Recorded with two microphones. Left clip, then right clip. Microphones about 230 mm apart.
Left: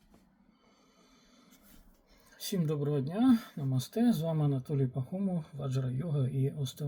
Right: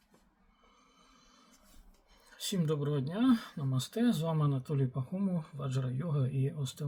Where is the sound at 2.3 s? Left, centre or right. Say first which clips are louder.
Right 1 dB; centre.